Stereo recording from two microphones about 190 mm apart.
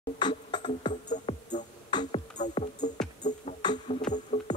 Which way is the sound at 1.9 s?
25° left (ahead or behind).